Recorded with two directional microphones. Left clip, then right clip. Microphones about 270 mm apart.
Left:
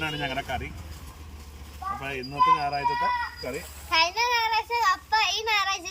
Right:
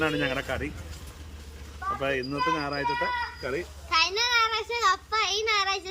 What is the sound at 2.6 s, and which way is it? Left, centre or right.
Speech, centre.